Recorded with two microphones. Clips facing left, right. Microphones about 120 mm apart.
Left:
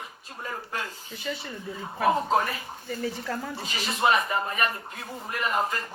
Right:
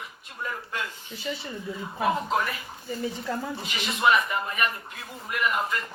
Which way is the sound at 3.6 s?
35° left (ahead or behind).